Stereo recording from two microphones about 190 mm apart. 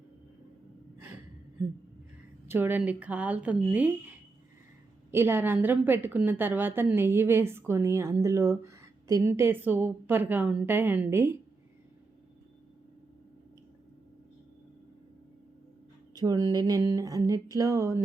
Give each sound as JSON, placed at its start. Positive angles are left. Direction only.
{"t": 2.5, "sound": "a woman's voice", "side_deg": -10}
{"t": 5.1, "sound": "a woman's voice", "side_deg": -10}
{"t": 16.1, "sound": "speech", "side_deg": -20}
{"t": 16.5, "sound": "a sound", "side_deg": -20}